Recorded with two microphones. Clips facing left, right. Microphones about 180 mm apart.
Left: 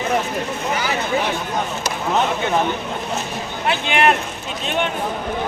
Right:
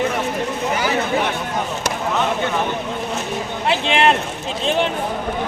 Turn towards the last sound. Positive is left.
turn(degrees=-25)  # may be behind; listen again after turning